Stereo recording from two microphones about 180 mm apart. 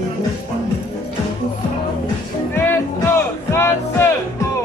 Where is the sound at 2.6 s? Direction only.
15° left (ahead or behind).